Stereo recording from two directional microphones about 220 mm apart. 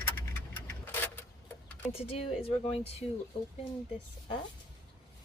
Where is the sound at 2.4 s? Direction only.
30° left (ahead or behind).